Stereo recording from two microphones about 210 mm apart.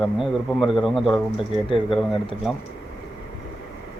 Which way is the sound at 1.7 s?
25° left (ahead or behind).